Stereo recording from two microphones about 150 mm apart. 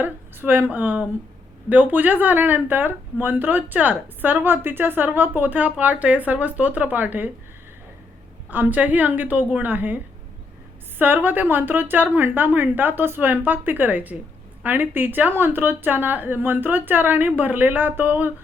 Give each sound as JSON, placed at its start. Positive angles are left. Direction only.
{"t": 0.0, "sound": "speech", "side_deg": -10}
{"t": 8.4, "sound": "speech", "side_deg": -10}